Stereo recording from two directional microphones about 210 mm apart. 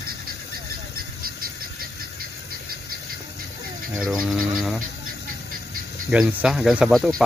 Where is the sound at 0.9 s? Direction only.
45° right (ahead or behind).